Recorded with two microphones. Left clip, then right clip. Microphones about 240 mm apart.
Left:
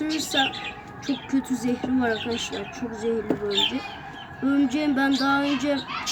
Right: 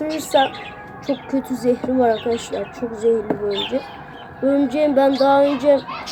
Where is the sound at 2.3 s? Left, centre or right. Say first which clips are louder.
Right 5 dB; right.